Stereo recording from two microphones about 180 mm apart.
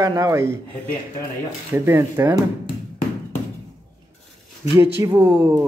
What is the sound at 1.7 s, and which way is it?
Speech, 15° right (ahead or behind).